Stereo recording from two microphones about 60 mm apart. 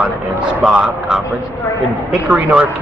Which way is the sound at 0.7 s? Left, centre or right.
Centre.